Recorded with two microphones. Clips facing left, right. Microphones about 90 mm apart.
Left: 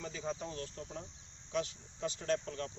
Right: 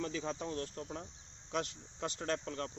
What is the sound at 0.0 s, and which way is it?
Speech, 75° right (ahead or behind).